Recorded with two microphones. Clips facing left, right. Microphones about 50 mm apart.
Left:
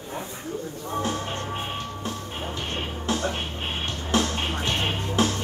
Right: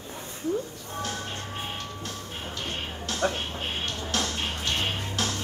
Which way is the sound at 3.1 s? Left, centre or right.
Left.